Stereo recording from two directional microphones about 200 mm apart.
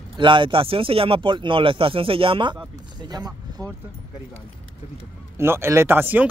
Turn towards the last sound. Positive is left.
turn(degrees=-10)  # may be behind; listen again after turning